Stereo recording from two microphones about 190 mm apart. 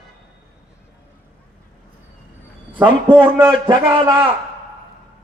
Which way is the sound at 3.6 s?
20° right (ahead or behind).